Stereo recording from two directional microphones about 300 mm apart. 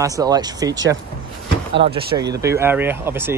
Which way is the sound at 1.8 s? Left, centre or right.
Centre.